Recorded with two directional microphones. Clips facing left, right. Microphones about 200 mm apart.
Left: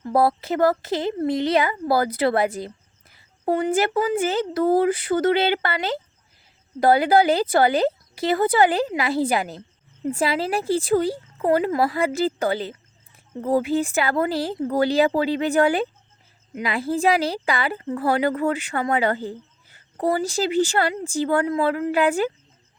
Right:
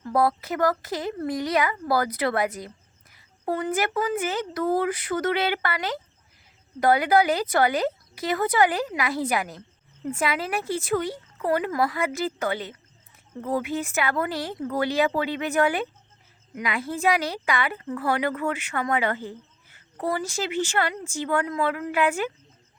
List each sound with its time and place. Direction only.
0.0 s a woman's voice: 30° left (ahead or behind)